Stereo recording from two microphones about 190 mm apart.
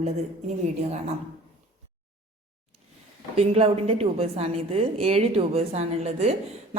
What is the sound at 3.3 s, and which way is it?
A woman's voice, 35° right (ahead or behind).